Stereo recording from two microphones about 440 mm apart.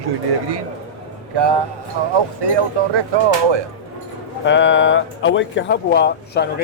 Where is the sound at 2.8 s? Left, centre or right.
Right.